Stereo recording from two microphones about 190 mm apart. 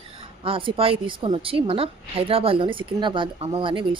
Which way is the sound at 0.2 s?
30° right (ahead or behind).